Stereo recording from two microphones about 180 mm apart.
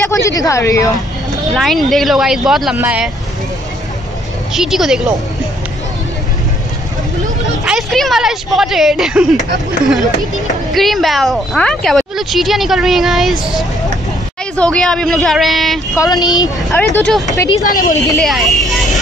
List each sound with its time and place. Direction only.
0.1 s a woman's voice: 20° left (ahead or behind)
1.5 s speech: centre (ahead or behind)
4.6 s speech: centre (ahead or behind)
7.6 s speech: centre (ahead or behind)
10.7 s speech: centre (ahead or behind)
16.0 s speech: 20° left (ahead or behind)
16.7 s speech: 10° left (ahead or behind)
17.6 s a woman's voice: 50° left (ahead or behind)
18.2 s speech: centre (ahead or behind)